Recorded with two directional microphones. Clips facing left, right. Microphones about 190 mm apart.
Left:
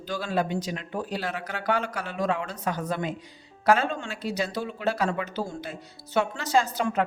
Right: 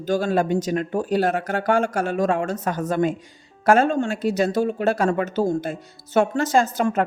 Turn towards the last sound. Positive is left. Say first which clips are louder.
# right 5 dB
turn(degrees=-45)  # may be behind; listen again after turning